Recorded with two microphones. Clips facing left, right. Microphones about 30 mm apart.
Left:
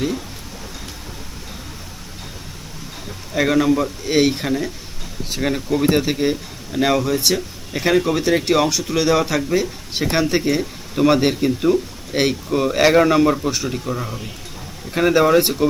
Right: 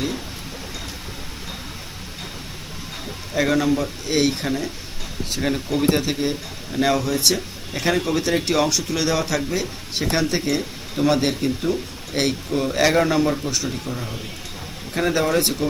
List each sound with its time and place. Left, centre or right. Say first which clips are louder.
3.3 s speech: left 3 dB; centre
12.5 s speech: left 4 dB; left